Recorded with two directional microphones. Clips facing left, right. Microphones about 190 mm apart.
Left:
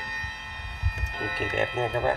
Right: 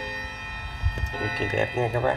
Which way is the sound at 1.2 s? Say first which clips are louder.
Right 2 dB; 30° right (ahead or behind).